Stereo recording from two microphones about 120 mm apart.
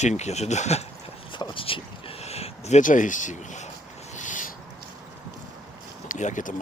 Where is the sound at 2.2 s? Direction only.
60° left (ahead or behind); by 4.5 s 90° left.